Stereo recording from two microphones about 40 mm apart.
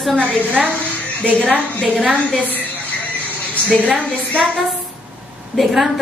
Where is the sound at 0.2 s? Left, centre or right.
Right.